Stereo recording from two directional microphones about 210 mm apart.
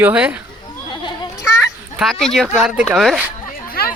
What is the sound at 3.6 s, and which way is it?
Chatter, 45° left (ahead or behind).